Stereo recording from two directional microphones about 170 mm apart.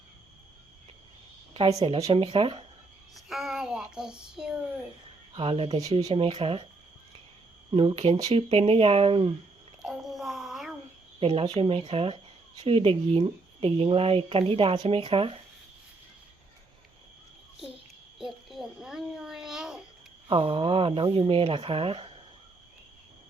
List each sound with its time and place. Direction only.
1.5 s speech: 30° right (ahead or behind)
3.2 s child singing: centre (ahead or behind)
5.3 s speech: 30° right (ahead or behind)
7.7 s speech: 30° right (ahead or behind)
9.8 s a sound: centre (ahead or behind)
11.2 s speech: 35° right (ahead or behind)
18.2 s a sound: centre (ahead or behind)
20.2 s speech: 30° right (ahead or behind)